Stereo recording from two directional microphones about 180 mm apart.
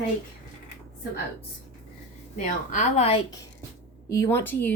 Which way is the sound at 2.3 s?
45° left (ahead or behind).